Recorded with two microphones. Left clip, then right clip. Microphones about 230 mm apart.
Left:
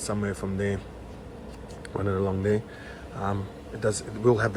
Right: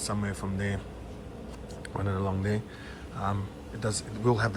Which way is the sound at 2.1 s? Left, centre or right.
Left.